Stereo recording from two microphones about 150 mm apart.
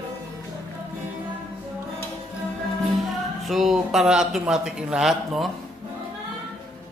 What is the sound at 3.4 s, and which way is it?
Speech, centre (ahead or behind).